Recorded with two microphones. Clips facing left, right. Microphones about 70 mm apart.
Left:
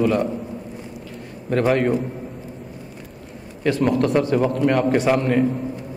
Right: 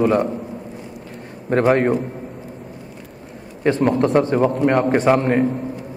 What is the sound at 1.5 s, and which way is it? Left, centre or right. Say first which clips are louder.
Speech: right 3 dB; right.